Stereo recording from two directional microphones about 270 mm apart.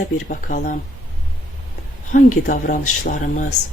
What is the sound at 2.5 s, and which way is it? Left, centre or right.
Speech, left.